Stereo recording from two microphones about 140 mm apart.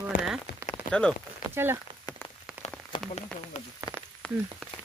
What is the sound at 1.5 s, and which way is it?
Speech, 15° right (ahead or behind).